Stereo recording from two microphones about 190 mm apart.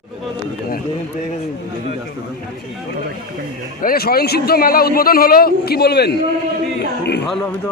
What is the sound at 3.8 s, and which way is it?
A man's voice, 50° left (ahead or behind).